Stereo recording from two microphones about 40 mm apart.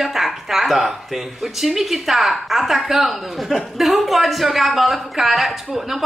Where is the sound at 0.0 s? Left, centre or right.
Centre.